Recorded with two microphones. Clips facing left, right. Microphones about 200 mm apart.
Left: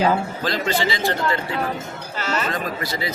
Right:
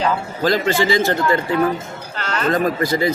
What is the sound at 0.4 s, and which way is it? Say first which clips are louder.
Speech: right 8 dB; 45° right (ahead or behind).